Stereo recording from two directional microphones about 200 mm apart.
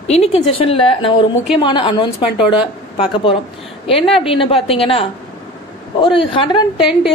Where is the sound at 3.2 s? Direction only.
25° left (ahead or behind).